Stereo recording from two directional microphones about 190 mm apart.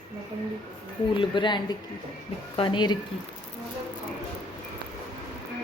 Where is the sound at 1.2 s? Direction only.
25° left (ahead or behind).